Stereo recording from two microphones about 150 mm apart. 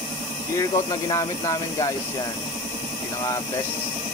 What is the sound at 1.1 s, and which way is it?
Speech, 25° left (ahead or behind).